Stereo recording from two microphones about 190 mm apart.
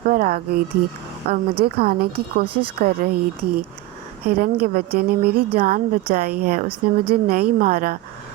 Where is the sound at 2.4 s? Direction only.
25° right (ahead or behind).